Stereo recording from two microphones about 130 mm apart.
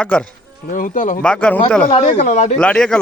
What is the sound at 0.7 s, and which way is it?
Speech, 90° left.